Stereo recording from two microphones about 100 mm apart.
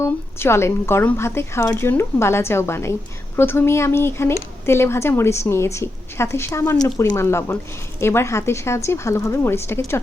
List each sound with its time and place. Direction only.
0.0 s speech: 25° left (ahead or behind)